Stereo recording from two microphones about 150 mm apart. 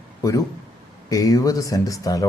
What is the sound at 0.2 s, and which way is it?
A man's voice, 20° left (ahead or behind).